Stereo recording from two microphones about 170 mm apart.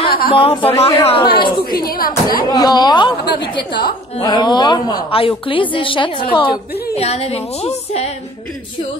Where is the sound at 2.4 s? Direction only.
25° left (ahead or behind).